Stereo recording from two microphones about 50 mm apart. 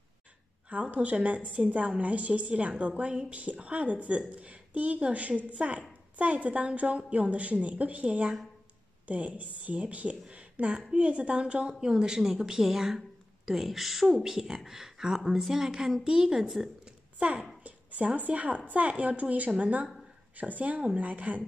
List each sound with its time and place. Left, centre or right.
0.9 s a woman's voice: right
10.3 s a sound: right
11.0 s a woman's voice: right
11.9 s speech: centre
17.2 s a woman's voice: right